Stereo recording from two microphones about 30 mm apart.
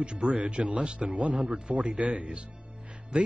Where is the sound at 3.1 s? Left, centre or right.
Right.